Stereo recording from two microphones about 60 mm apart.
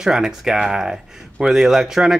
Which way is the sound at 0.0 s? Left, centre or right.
Centre.